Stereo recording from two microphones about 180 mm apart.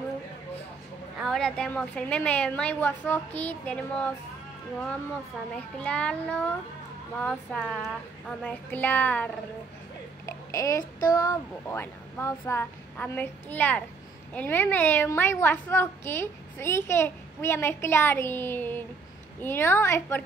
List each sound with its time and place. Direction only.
1.2 s a woman's voice: centre (ahead or behind)
5.8 s a woman's voice: 5° left (ahead or behind)
10.2 s a sound: 20° left (ahead or behind)
11.1 s a woman's voice: 20° left (ahead or behind)